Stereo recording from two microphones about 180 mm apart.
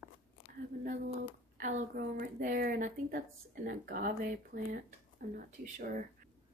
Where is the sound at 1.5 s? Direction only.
45° right (ahead or behind).